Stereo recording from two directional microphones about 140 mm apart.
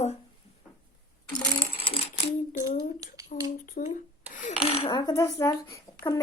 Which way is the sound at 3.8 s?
75° left (ahead or behind).